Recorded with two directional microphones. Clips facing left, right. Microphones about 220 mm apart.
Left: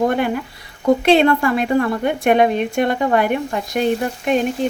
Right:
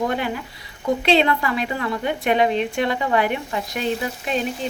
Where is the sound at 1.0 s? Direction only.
50° left (ahead or behind).